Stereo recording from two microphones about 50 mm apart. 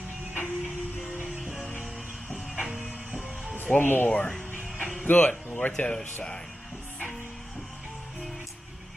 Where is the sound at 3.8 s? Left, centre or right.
Left.